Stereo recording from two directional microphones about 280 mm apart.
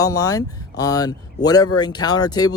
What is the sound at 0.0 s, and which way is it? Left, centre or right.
Speech, centre.